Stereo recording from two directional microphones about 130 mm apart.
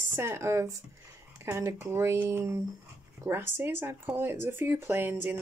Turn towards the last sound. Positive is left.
turn(degrees=-15)  # may be behind; listen again after turning